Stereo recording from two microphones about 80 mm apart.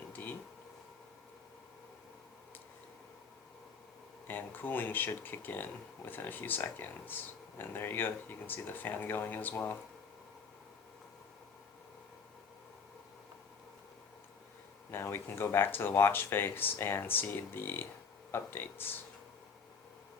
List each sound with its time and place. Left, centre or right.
0.1 s a sound: left
4.3 s speech: left
14.8 s speech: left